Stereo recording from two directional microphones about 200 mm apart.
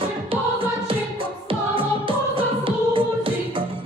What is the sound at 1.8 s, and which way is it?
Music, 25° right (ahead or behind).